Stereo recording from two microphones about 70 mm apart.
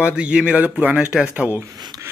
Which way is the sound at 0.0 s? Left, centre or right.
Centre.